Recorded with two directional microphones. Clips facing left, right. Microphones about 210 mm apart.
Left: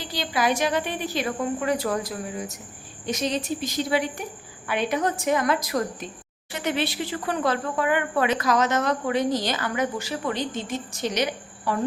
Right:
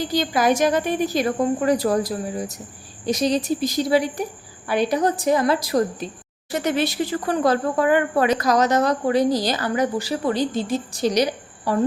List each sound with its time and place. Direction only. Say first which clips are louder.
0.0 s a woman's voice: right 6 dB; 45° right (ahead or behind)
6.5 s speech: right 5 dB; 40° right (ahead or behind)